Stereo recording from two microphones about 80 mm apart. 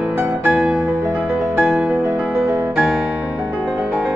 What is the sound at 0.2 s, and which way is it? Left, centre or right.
Music, right.